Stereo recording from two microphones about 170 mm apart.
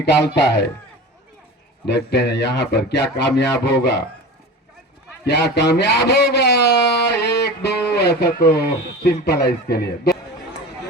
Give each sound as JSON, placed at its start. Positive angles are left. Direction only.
{"t": 0.0, "sound": "speech", "side_deg": 85}
{"t": 1.8, "sound": "speech", "side_deg": 75}
{"t": 5.2, "sound": "speech", "side_deg": 80}